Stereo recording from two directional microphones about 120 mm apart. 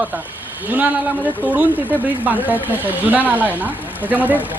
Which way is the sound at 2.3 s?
15° right (ahead or behind).